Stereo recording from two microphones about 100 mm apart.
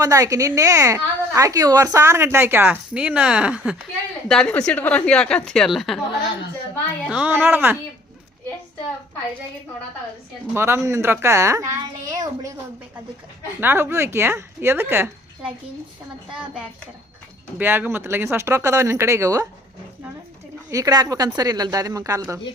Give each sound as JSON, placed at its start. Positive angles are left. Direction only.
{"t": 0.0, "sound": "a woman's voice", "side_deg": -35}
{"t": 2.9, "sound": "speech", "side_deg": -10}
{"t": 4.3, "sound": "a woman's voice", "side_deg": 10}
{"t": 7.1, "sound": "speech", "side_deg": -10}
{"t": 7.3, "sound": "speech", "side_deg": -20}
{"t": 10.5, "sound": "a woman's voice", "side_deg": -25}
{"t": 13.6, "sound": "speech", "side_deg": -20}
{"t": 17.6, "sound": "speech", "side_deg": -20}
{"t": 20.7, "sound": "a woman's voice", "side_deg": -35}